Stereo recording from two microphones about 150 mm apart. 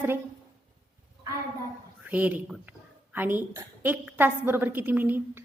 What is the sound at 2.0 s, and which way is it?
A woman's voice, 10° right (ahead or behind).